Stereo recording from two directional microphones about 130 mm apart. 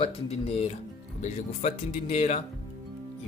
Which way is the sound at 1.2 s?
65° left (ahead or behind).